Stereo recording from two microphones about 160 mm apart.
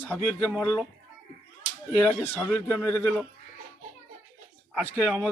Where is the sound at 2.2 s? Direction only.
15° left (ahead or behind).